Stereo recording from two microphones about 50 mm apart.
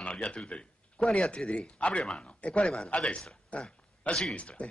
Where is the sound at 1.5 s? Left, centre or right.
Left.